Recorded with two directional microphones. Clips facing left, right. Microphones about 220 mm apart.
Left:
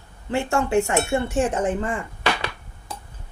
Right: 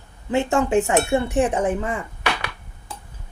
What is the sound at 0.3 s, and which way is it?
Speech, 20° right (ahead or behind).